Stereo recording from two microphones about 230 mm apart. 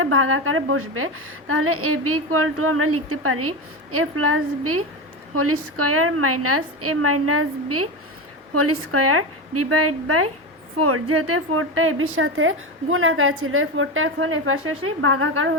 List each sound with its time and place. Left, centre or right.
0.0 s a woman's voice: right